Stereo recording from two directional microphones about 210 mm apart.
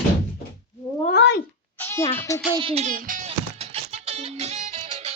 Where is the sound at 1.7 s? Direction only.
10° left (ahead or behind).